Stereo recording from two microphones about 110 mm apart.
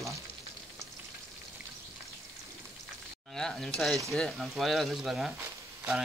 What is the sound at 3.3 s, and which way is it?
Speech, 5° left (ahead or behind).